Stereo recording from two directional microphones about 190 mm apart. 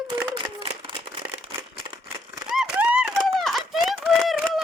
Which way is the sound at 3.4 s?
Centre (ahead or behind).